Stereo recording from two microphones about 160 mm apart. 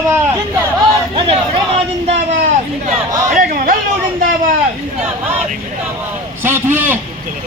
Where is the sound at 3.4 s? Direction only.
60° right (ahead or behind).